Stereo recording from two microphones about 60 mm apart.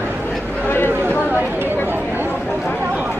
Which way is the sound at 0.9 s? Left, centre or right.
Right.